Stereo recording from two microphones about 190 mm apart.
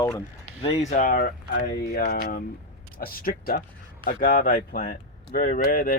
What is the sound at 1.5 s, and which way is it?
Speech, 60° left (ahead or behind).